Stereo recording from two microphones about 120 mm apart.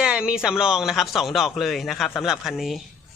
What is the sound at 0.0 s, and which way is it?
A man's voice, 5° right (ahead or behind).